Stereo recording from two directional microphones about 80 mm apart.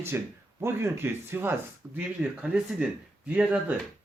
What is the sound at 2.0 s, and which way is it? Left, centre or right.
Speech, centre.